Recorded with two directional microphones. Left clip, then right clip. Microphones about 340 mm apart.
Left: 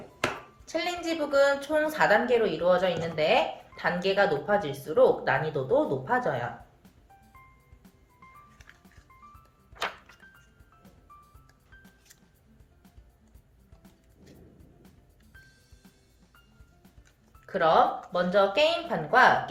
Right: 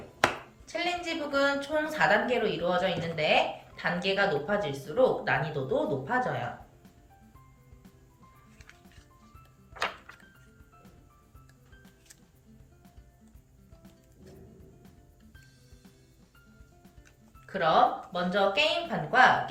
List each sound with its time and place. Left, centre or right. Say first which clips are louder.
0.6 s a woman's voice: left 1 dB; centre
8.5 s music: even; centre
14.2 s music: right 2 dB; centre
17.4 s a woman's voice: left 2 dB; centre